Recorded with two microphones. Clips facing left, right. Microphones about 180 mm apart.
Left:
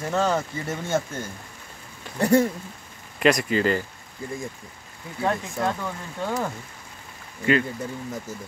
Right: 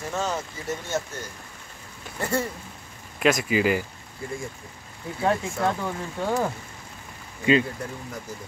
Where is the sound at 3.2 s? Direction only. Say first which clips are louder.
Left 1 dB; centre (ahead or behind).